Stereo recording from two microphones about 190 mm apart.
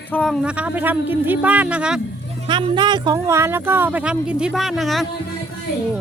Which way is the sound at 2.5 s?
25° right (ahead or behind).